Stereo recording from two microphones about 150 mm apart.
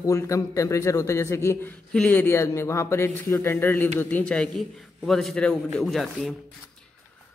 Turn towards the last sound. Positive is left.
turn(degrees=0)  # may be behind; listen again after turning